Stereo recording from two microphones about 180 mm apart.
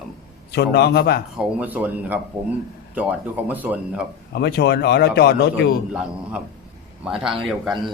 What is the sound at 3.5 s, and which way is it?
Speech, 10° right (ahead or behind).